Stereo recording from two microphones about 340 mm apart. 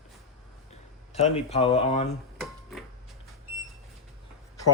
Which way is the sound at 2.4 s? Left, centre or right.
Centre.